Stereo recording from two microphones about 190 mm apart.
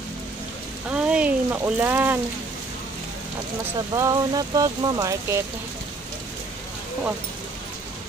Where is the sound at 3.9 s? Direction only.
15° right (ahead or behind).